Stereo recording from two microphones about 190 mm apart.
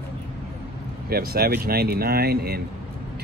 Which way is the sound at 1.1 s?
55° right (ahead or behind).